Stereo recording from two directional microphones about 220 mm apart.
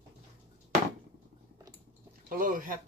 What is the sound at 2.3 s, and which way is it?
Speech, 40° right (ahead or behind).